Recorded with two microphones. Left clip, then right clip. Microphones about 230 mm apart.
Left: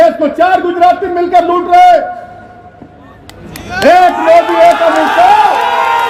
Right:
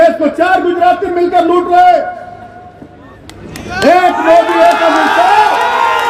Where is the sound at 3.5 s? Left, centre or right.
Centre.